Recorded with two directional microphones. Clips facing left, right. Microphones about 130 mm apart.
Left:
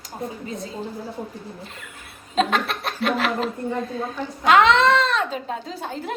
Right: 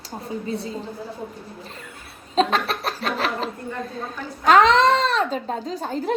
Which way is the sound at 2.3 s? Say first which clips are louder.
Right 1 dB; 35° right (ahead or behind).